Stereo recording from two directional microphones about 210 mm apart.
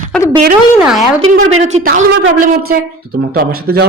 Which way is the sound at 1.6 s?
35° right (ahead or behind).